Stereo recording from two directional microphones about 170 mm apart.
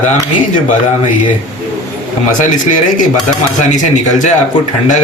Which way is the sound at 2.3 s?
50° left (ahead or behind).